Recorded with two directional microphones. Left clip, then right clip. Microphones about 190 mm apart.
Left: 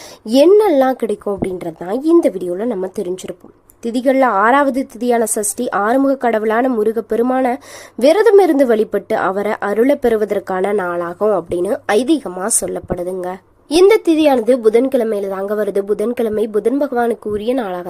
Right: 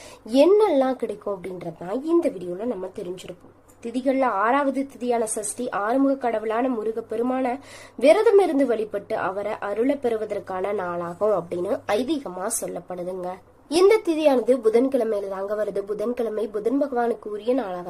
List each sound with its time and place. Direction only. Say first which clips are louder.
0.3 s a woman's voice: left 7 dB; 35° left (ahead or behind)